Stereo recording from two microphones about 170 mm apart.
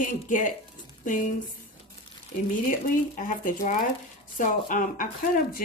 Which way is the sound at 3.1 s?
50° left (ahead or behind).